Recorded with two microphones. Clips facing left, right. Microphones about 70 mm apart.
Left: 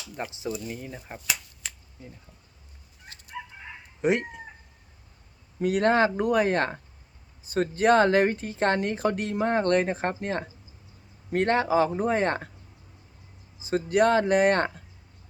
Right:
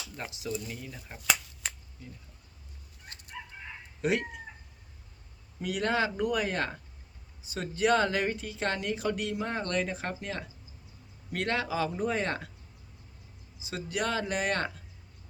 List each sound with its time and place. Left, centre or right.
0.2 s speech: left
3.3 s chicken: centre
4.0 s speech: left
5.5 s speech: left
13.6 s speech: left